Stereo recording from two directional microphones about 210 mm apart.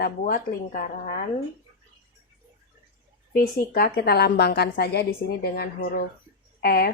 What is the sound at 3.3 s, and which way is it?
A woman's voice, 45° left (ahead or behind).